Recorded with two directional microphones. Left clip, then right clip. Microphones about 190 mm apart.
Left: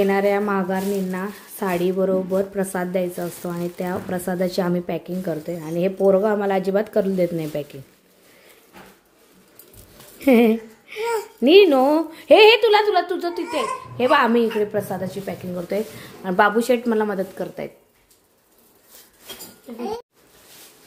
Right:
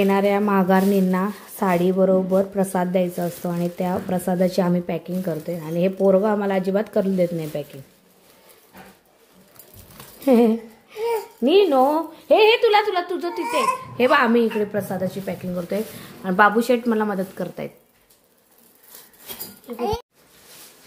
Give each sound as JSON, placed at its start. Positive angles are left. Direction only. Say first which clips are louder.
{"t": 0.0, "sound": "a woman's voice", "louder": "even", "side_deg": -5}
{"t": 0.6, "sound": "a woman's voice", "louder": "right 5 dB", "side_deg": -25}
{"t": 1.2, "sound": "a woman's voice", "louder": "right 3 dB", "side_deg": -5}
{"t": 10.2, "sound": "a sound", "louder": "left 1 dB", "side_deg": 15}
{"t": 11.4, "sound": "a woman's voice", "louder": "left 3 dB", "side_deg": 20}
{"t": 12.4, "sound": "a woman's voice", "louder": "left 2 dB", "side_deg": 5}